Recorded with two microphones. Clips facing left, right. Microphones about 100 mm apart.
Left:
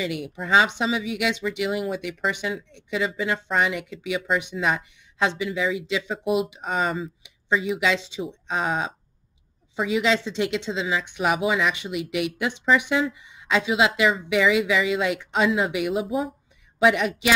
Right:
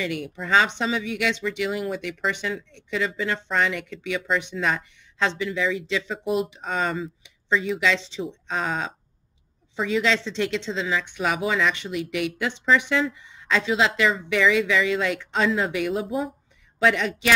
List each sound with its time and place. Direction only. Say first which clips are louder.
0.0 s speech: even; 15° left (ahead or behind)
16.1 s speech: left 1 dB; centre (ahead or behind)
16.8 s speech: left 2 dB; 15° left (ahead or behind)